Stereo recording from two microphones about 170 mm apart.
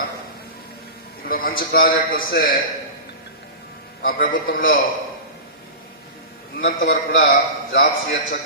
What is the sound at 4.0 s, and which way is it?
Speech, 55° left (ahead or behind).